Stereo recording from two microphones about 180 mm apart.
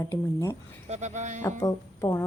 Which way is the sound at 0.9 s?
40° right (ahead or behind).